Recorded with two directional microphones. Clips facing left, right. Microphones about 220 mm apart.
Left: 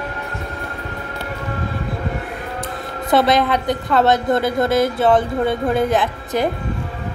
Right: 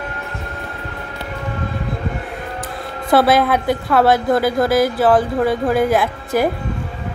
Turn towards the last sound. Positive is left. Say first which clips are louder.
# right 2 dB
turn(degrees=-5)  # may be behind; listen again after turning